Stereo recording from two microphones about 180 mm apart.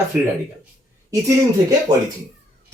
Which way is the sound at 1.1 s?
20° right (ahead or behind).